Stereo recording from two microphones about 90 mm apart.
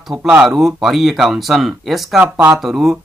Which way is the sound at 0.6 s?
5° right (ahead or behind).